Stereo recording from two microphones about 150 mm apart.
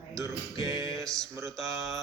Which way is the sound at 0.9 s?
Centre (ahead or behind).